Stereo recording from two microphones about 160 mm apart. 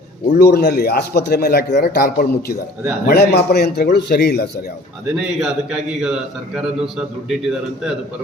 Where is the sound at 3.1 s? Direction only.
90° left.